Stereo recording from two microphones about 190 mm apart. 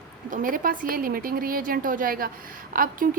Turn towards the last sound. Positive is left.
turn(degrees=-50)  # may be behind; listen again after turning